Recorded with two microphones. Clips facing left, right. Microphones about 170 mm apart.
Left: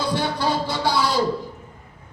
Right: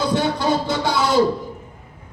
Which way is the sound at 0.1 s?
20° right (ahead or behind).